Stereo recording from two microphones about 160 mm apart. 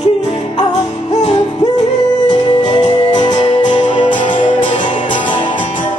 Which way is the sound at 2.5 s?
25° left (ahead or behind).